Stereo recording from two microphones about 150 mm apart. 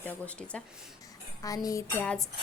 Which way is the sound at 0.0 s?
10° left (ahead or behind).